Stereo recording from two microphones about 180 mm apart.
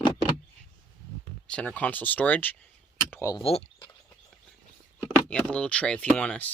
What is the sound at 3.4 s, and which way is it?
Speech, 30° left (ahead or behind).